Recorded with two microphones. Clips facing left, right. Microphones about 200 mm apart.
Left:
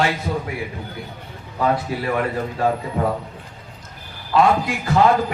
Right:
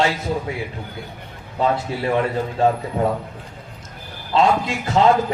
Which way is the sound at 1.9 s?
25° right (ahead or behind).